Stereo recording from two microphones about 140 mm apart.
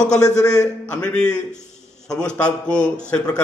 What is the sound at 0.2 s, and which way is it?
Speech, 25° left (ahead or behind).